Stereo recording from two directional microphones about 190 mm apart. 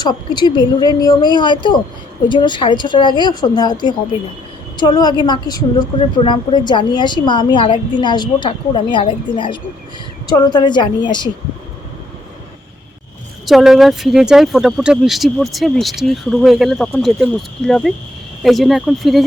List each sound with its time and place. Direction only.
0.0 s a woman's voice: 20° left (ahead or behind)
13.4 s speech: centre (ahead or behind)